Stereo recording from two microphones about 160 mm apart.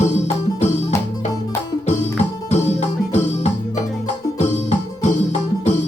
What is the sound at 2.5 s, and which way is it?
Music, 45° left (ahead or behind).